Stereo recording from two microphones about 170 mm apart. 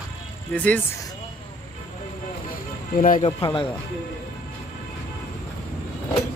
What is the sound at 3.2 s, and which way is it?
Speech, 30° left (ahead or behind).